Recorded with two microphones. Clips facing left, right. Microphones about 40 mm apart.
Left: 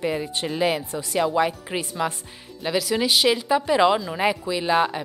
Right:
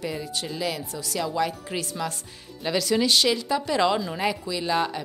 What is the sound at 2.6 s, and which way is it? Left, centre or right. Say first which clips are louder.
A woman's voice: even; centre.